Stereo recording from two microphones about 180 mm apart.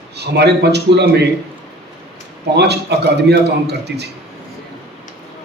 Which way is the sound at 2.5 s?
65° right (ahead or behind).